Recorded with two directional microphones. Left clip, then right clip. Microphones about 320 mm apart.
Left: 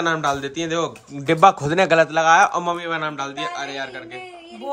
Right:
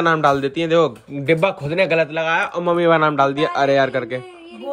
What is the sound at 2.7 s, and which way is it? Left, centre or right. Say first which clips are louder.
A man's voice: right 10 dB; centre.